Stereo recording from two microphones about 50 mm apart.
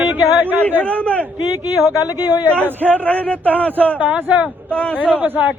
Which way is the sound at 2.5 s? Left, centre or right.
Right.